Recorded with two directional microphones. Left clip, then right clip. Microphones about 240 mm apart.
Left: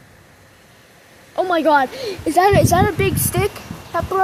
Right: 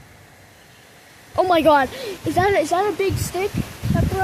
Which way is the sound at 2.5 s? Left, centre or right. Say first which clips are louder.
Left 4 dB; left.